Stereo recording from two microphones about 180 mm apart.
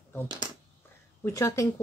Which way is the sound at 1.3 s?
15° left (ahead or behind).